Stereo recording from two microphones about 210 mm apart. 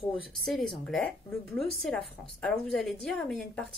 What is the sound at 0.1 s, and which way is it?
A woman's voice, centre (ahead or behind).